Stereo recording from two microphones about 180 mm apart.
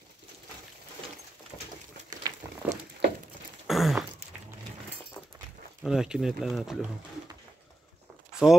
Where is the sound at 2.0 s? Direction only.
20° right (ahead or behind).